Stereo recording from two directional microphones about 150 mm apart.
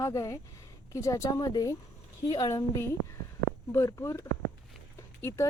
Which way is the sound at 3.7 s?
20° left (ahead or behind).